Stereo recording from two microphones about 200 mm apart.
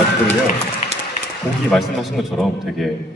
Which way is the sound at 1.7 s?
Centre (ahead or behind).